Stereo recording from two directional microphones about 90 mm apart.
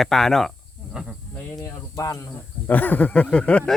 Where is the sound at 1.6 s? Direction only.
40° left (ahead or behind).